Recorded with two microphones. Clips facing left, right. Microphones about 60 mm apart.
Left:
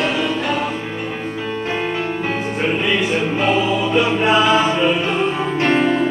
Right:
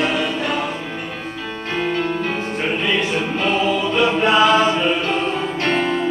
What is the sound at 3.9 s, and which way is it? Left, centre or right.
Music, centre.